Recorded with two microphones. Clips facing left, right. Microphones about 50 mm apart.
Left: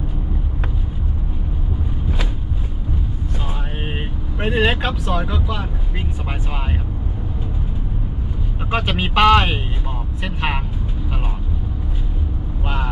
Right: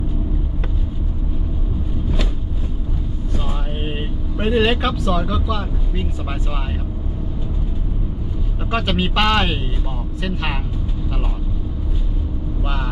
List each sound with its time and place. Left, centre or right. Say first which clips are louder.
4.4 s vehicle: right 1 dB; centre
4.8 s speech: right 2 dB; left
8.7 s speech: even; centre
12.6 s vehicle: left 3 dB; left